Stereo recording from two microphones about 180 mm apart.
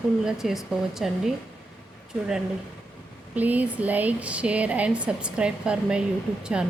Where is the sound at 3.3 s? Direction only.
10° right (ahead or behind).